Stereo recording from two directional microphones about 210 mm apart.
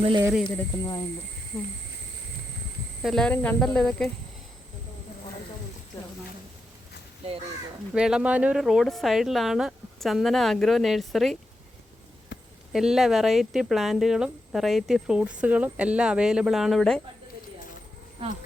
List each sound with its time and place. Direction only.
0.2 s speech: 10° right (ahead or behind)
0.4 s speech: 20° left (ahead or behind)
1.5 s speech: centre (ahead or behind)
3.0 s speech: centre (ahead or behind)
7.9 s speech: 5° right (ahead or behind)
12.3 s a sound: 55° left (ahead or behind)
12.7 s speech: centre (ahead or behind)